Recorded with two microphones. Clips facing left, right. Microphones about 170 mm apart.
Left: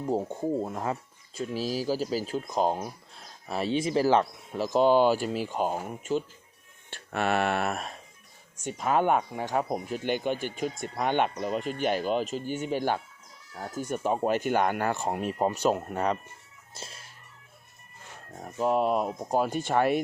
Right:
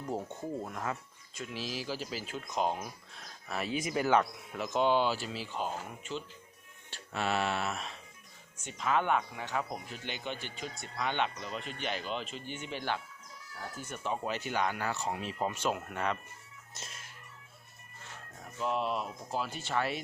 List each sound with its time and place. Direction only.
0.0 s speech: 30° left (ahead or behind); by 6.2 s 45° left (ahead or behind)
6.9 s a sound: 60° left (ahead or behind)
8.8 s speech: 45° left (ahead or behind)
16.7 s music: 30° left (ahead or behind)
18.3 s speech: 40° left (ahead or behind)